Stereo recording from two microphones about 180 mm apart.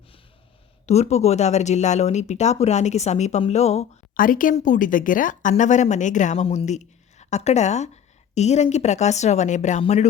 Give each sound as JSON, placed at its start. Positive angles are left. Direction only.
{"t": 0.9, "sound": "speech", "side_deg": 35}
{"t": 4.2, "sound": "speech", "side_deg": 50}